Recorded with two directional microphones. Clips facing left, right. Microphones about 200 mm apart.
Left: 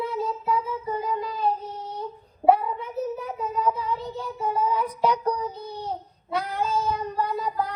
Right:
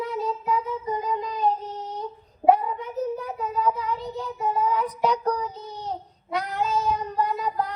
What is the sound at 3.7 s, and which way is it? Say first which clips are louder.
Child singing: even; 15° right (ahead or behind).